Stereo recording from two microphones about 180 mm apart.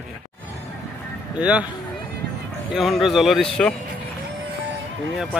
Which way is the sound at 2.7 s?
Centre (ahead or behind).